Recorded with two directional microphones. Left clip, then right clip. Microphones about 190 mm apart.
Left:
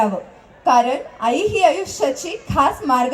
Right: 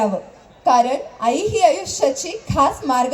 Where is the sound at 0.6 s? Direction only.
25° right (ahead or behind).